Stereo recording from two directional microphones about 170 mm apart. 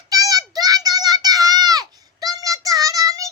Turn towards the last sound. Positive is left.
turn(degrees=-20)  # may be behind; listen again after turning